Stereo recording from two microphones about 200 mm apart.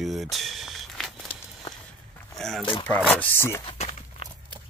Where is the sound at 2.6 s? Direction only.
25° left (ahead or behind).